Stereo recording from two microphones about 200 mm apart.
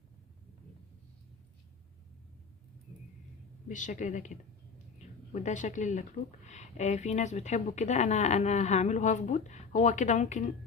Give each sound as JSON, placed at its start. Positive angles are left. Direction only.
{"t": 3.7, "sound": "speech", "side_deg": 40}